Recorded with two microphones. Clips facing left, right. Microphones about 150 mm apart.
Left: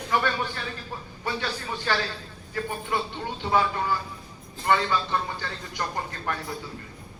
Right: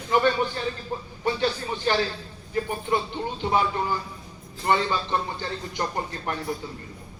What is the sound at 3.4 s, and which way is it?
Speech, 25° right (ahead or behind).